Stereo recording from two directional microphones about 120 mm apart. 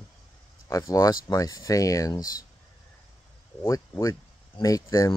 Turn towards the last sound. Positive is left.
turn(degrees=30)  # may be behind; listen again after turning